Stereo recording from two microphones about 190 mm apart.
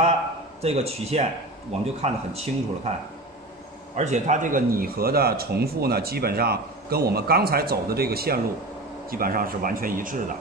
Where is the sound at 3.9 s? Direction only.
35° right (ahead or behind).